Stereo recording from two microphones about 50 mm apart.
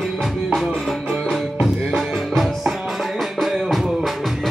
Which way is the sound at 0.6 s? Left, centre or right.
Centre.